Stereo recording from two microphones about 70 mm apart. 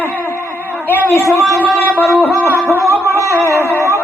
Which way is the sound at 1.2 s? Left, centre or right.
Right.